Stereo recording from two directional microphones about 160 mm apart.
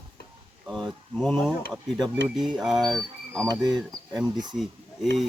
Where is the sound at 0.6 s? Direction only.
Centre (ahead or behind).